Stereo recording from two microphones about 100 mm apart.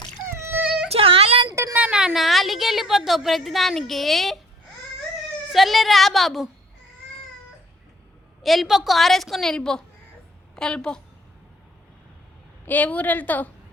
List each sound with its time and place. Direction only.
0.3 s baby cry: 25° right (ahead or behind)
0.9 s a sound: 70° right (ahead or behind)
1.7 s a woman's voice: 10° right (ahead or behind)
5.5 s a woman's voice: centre (ahead or behind)
8.4 s a woman's voice: centre (ahead or behind)
12.6 s a woman's voice: 15° left (ahead or behind)